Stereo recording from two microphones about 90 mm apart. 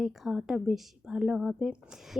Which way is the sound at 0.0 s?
Centre (ahead or behind).